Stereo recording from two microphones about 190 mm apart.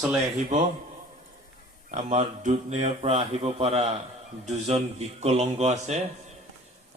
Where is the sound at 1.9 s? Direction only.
40° right (ahead or behind).